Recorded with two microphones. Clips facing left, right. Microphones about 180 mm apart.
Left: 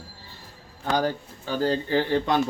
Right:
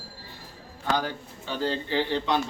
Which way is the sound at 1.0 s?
45° left (ahead or behind).